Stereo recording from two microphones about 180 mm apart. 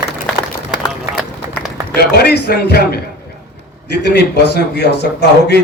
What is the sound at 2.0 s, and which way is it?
A man's voice, 60° left (ahead or behind).